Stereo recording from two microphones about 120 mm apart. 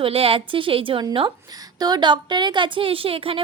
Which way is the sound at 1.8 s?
35° right (ahead or behind).